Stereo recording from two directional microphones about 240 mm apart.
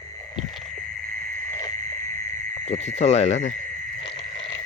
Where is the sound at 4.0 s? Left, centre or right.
Left.